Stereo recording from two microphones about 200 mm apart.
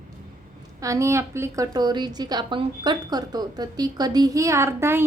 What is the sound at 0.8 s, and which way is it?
A woman's voice, 15° right (ahead or behind).